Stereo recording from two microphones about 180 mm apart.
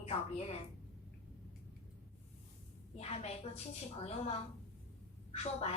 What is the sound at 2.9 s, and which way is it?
Speech, 35° left (ahead or behind).